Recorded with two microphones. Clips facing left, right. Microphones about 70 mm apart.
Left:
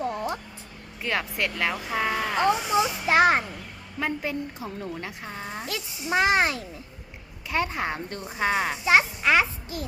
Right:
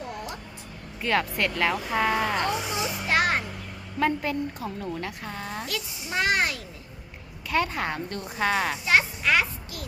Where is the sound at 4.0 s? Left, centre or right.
Centre; by 9.9 s left.